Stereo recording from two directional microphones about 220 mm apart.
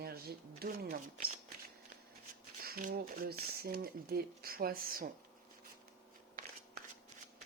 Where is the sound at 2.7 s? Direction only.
40° right (ahead or behind).